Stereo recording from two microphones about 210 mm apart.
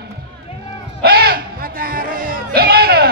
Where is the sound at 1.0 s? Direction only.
50° right (ahead or behind).